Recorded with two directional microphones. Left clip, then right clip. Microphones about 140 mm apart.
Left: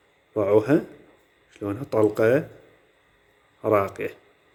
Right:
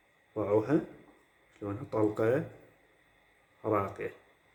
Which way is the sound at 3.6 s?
75° left (ahead or behind).